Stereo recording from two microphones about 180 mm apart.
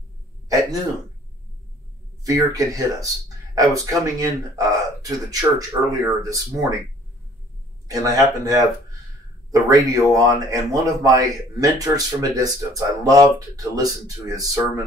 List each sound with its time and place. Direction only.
0.5 s hiccup: 20° right (ahead or behind)
2.2 s speech: 20° right (ahead or behind)
8.0 s speech: 20° right (ahead or behind)